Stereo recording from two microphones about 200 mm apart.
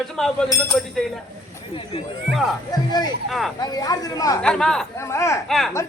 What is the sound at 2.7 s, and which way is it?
Speech, 20° left (ahead or behind).